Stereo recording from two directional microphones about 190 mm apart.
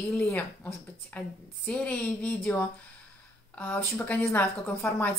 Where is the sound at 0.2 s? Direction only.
10° left (ahead or behind).